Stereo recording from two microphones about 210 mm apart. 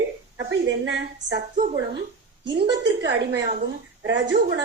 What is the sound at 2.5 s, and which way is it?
Speech, 60° right (ahead or behind).